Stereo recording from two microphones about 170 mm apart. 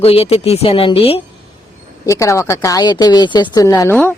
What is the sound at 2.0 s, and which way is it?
A woman's voice, 20° left (ahead or behind).